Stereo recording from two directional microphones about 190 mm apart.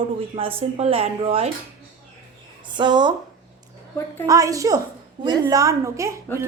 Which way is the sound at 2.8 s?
25° right (ahead or behind).